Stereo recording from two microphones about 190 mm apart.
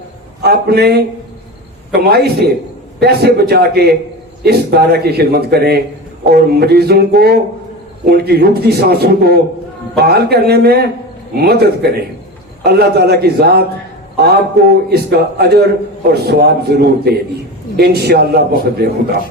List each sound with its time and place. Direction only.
0.4 s a man's voice: 55° right (ahead or behind)